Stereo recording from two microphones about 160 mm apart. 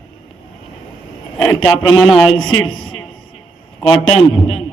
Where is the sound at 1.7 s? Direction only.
30° left (ahead or behind).